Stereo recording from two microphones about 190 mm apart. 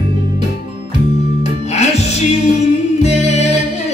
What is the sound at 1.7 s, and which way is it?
Music, 35° left (ahead or behind).